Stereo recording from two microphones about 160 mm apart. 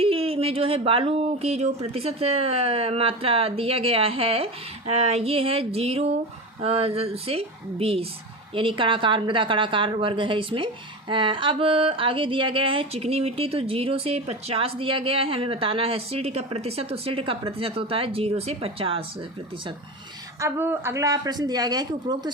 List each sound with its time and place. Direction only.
0.0 s speech: 35° right (ahead or behind)
20.4 s speech: 15° right (ahead or behind)